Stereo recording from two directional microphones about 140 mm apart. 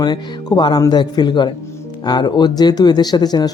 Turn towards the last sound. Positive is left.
turn(degrees=30)  # may be behind; listen again after turning